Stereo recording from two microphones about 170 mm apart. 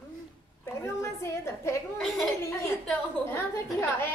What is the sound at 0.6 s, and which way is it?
A woman's voice, 15° left (ahead or behind).